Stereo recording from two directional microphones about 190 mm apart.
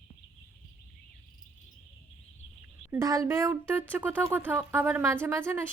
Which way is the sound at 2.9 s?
15° right (ahead or behind).